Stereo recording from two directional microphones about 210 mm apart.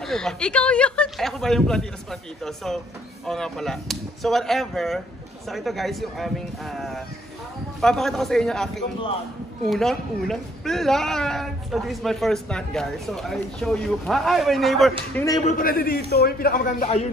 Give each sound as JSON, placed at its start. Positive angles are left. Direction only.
{"t": 0.0, "sound": "a man's voice", "side_deg": 0}
{"t": 15.4, "sound": "a man's voice", "side_deg": 45}